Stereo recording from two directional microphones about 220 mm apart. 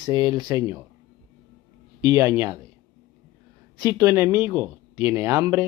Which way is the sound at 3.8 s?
15° right (ahead or behind).